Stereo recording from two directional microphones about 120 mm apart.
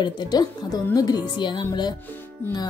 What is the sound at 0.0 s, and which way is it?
Speech, 35° left (ahead or behind).